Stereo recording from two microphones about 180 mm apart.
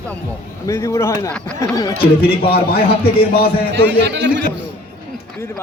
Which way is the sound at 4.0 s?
75° right (ahead or behind).